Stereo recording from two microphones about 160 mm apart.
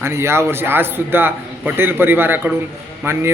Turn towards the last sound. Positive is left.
turn(degrees=-15)  # may be behind; listen again after turning